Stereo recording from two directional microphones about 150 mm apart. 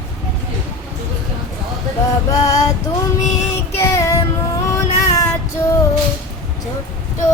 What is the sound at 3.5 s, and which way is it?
Child singing, 20° left (ahead or behind).